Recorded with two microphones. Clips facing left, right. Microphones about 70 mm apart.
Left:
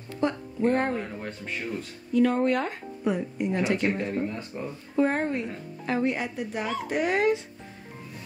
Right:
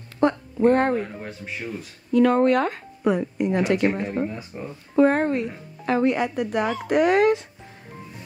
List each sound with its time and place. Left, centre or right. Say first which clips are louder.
0.2 s speech: right 6 dB; right
0.7 s speech: right 6 dB; right
1.2 s speech: right 1 dB; centre
2.1 s speech: right 5 dB; right
4.3 s speech: even; centre
4.9 s speech: right 6 dB; right